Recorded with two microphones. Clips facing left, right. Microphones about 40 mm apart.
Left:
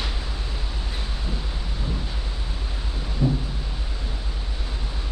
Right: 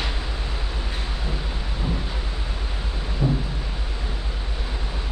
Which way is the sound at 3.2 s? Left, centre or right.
Right.